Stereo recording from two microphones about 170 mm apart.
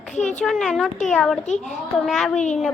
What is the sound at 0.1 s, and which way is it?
Speech, 45° left (ahead or behind).